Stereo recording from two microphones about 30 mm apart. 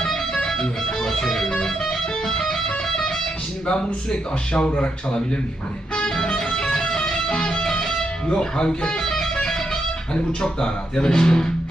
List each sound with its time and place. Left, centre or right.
0.4 s music: centre
3.7 s speech: left
4.6 s speech: left
6.1 s music: left
10.6 s speech: left
11.1 s speech: left